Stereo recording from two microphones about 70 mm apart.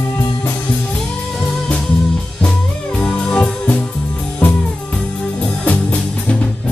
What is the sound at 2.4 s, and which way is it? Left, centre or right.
Music, centre.